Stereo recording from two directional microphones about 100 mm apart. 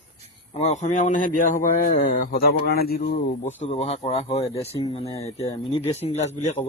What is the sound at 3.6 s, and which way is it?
Speech, 90° left.